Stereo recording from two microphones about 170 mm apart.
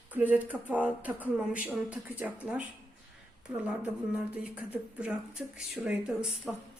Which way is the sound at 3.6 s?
10° right (ahead or behind).